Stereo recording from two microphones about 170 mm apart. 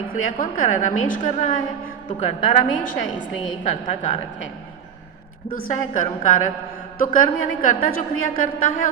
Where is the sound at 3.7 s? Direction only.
45° left (ahead or behind).